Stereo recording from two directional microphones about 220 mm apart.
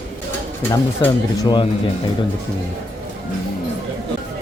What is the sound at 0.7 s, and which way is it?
Speech, 10° left (ahead or behind).